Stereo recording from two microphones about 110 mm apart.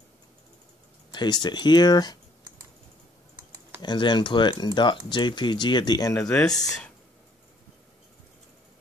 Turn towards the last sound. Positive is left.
turn(degrees=5)  # may be behind; listen again after turning